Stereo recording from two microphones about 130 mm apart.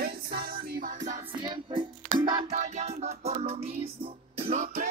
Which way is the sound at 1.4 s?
40° right (ahead or behind).